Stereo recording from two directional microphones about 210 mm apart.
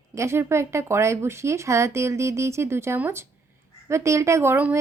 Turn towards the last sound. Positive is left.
turn(degrees=-10)  # may be behind; listen again after turning